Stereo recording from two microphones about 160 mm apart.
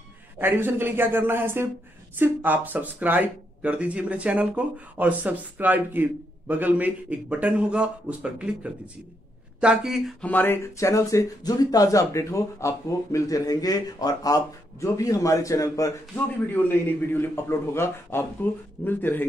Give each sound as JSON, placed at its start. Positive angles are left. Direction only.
{"t": 0.4, "sound": "speech", "side_deg": -15}
{"t": 10.2, "sound": "a man's voice", "side_deg": 10}